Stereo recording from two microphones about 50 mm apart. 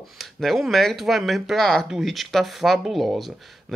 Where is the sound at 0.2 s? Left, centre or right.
Centre.